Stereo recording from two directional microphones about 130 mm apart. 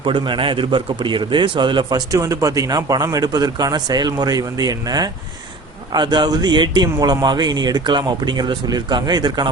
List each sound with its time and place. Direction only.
0.0 s a man's voice: 40° right (ahead or behind)
2.1 s a man's voice: 25° right (ahead or behind)